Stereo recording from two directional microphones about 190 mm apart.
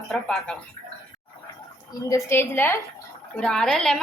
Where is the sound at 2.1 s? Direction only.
10° left (ahead or behind).